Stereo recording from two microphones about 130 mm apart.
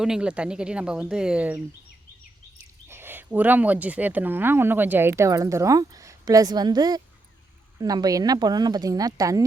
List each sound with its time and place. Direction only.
0.0 s speech: 5° right (ahead or behind)
2.9 s speech: 15° right (ahead or behind)